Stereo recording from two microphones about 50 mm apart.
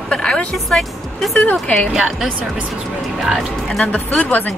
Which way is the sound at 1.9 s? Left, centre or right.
Centre.